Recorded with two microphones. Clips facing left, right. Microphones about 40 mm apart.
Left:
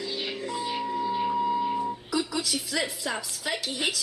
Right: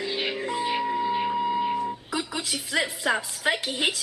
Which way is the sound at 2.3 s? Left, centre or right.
Right.